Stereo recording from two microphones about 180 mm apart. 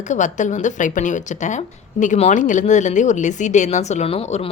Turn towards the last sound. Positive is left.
turn(degrees=35)  # may be behind; listen again after turning